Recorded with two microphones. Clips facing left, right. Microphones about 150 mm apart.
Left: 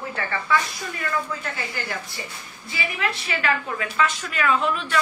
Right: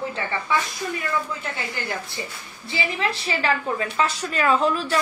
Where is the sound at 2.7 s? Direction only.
30° right (ahead or behind).